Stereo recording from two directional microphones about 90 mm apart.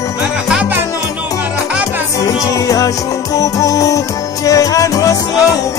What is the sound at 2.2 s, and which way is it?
Music, 40° left (ahead or behind).